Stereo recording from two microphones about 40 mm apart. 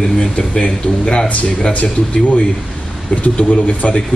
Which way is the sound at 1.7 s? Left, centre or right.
Left.